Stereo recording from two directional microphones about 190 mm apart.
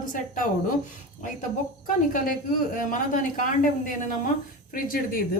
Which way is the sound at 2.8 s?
45° left (ahead or behind).